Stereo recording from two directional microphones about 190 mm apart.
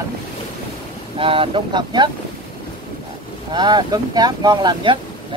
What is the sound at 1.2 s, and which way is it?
Speech, 30° right (ahead or behind).